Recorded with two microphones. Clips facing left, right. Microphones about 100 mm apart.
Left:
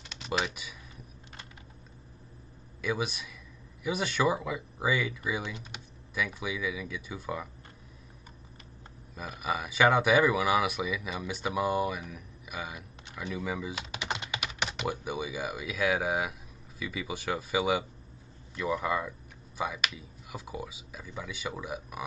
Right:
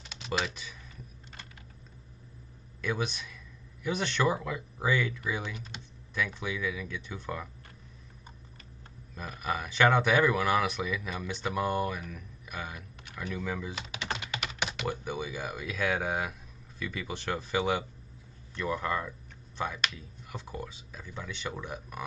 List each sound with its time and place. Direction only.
0.0 s computer keyboard: centre (ahead or behind)
2.8 s speech: 5° left (ahead or behind)
9.1 s speech: 10° left (ahead or behind)
13.3 s typing: 10° left (ahead or behind)
14.8 s speech: 10° left (ahead or behind)